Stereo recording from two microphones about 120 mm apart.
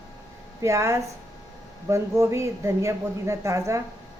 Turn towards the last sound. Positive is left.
turn(degrees=-25)  # may be behind; listen again after turning